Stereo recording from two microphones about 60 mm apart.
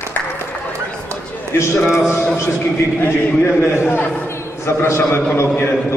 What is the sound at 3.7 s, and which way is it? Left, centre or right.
A man's voice, left.